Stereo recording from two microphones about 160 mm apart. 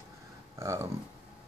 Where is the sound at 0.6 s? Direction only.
20° right (ahead or behind).